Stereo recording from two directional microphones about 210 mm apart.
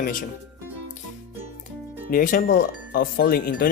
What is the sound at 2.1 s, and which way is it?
Speech, 40° left (ahead or behind).